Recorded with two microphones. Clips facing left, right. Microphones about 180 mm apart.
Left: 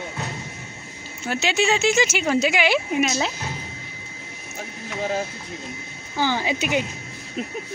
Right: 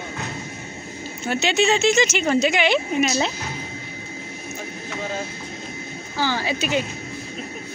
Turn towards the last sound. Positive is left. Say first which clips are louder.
# even
turn(degrees=15)  # may be behind; listen again after turning